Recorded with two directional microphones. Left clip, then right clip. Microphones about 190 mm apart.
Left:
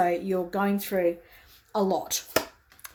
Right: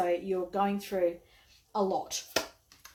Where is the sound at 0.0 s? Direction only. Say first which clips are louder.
Left 5 dB; 55° left (ahead or behind).